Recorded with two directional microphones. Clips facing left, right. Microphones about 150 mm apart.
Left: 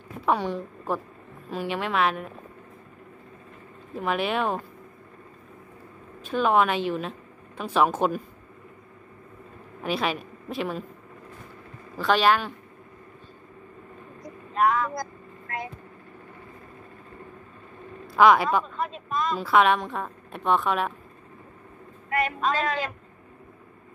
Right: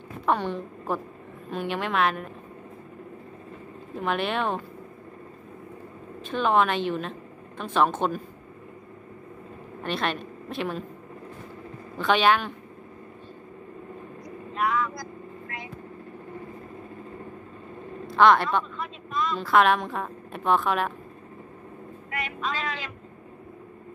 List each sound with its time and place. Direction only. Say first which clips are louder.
0.2 s a woman's voice: left 1 dB; 5° left (ahead or behind)
3.9 s a woman's voice: left 1 dB; centre (ahead or behind)
6.2 s a woman's voice: left 1 dB; 5° left (ahead or behind)
9.8 s speech: left 2 dB; 5° left (ahead or behind)
12.0 s a woman's voice: even; centre (ahead or behind)
14.2 s vehicle: left 5 dB; 45° left (ahead or behind)
18.1 s a woman's voice: left 1 dB; 5° left (ahead or behind)
18.8 s vehicle: left 2 dB; 45° left (ahead or behind)
19.3 s a woman's voice: even; centre (ahead or behind)
22.1 s a woman's voice: left 7 dB; 45° left (ahead or behind)